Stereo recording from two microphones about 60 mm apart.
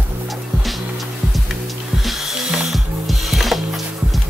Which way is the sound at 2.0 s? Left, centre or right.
Centre.